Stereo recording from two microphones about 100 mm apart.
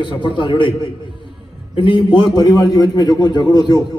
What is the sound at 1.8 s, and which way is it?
Speech, 60° left (ahead or behind).